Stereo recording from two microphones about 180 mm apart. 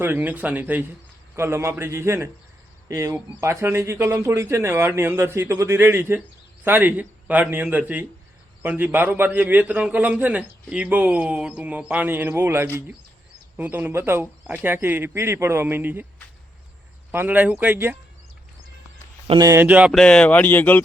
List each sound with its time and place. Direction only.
0.0 s a man's voice: 10° right (ahead or behind)
17.1 s a man's voice: 10° right (ahead or behind)
19.5 s a man's voice: 10° right (ahead or behind)
20.0 s speech: 5° left (ahead or behind)